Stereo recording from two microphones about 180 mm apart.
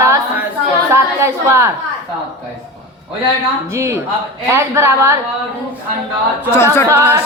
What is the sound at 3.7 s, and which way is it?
Speech, 15° right (ahead or behind).